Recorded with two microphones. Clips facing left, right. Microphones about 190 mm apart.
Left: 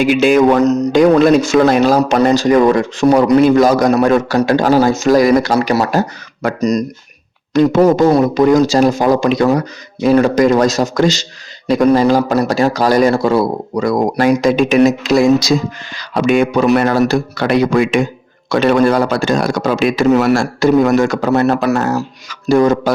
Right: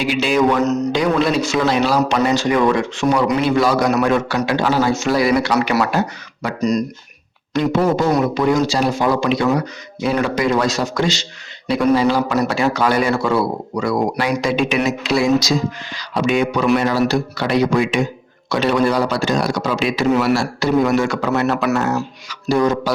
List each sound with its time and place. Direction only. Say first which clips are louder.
0.0 s speech: left 6 dB; 50° left (ahead or behind)
0.6 s a man's voice: left 7 dB; 35° left (ahead or behind)
5.5 s a man's voice: left 3 dB; 30° left (ahead or behind); by 22.9 s 50° left (ahead or behind)